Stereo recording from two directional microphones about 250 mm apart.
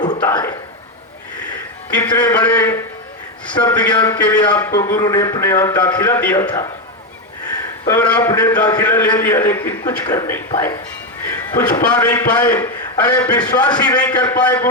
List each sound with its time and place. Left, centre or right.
0.2 s a man's voice: centre
2.0 s a man's voice: centre
2.3 s a man's voice: centre
7.9 s a man's voice: centre